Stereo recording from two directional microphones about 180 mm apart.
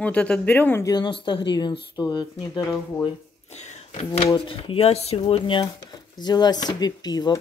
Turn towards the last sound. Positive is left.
turn(degrees=20)  # may be behind; listen again after turning